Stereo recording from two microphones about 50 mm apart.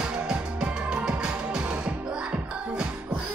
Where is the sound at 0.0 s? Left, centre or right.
Centre.